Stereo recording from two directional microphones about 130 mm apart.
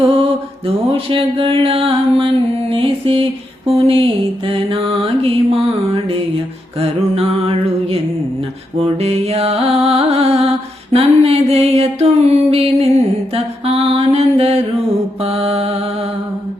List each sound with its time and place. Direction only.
0.0 s mantra: 50° right (ahead or behind)
0.9 s a sound: 45° right (ahead or behind)
3.7 s mantra: 50° right (ahead or behind)
6.7 s mantra: 50° right (ahead or behind)
8.8 s music: 55° right (ahead or behind)
10.9 s a sound: 50° right (ahead or behind)
13.3 s mantra: 50° right (ahead or behind)